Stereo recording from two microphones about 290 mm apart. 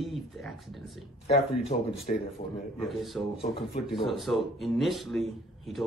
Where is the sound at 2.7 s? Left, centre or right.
Centre.